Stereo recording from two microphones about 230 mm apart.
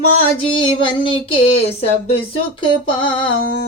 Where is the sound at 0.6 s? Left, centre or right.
Left.